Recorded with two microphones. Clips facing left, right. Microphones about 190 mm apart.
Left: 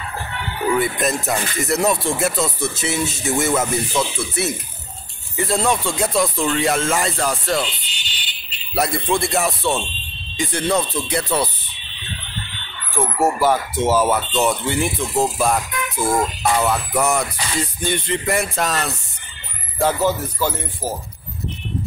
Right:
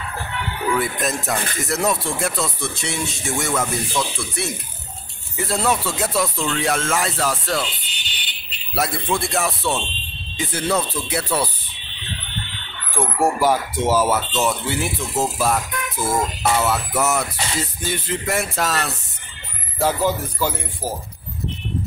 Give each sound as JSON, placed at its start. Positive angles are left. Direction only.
{"t": 0.7, "sound": "speech", "side_deg": 0}
{"t": 7.9, "sound": "music", "side_deg": -55}
{"t": 8.7, "sound": "speech", "side_deg": 0}
{"t": 12.9, "sound": "speech", "side_deg": -10}
{"t": 16.6, "sound": "speech", "side_deg": -5}